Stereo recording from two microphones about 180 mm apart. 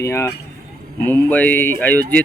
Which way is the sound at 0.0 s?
15° left (ahead or behind).